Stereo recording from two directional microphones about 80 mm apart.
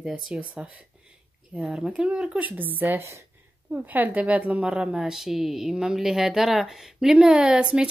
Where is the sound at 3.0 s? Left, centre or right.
Right.